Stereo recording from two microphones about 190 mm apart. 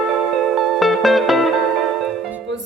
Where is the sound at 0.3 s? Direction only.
Centre (ahead or behind).